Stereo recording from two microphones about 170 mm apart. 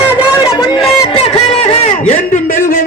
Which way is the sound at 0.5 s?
30° left (ahead or behind).